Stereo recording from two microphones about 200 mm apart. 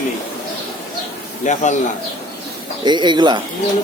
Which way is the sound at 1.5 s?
35° left (ahead or behind).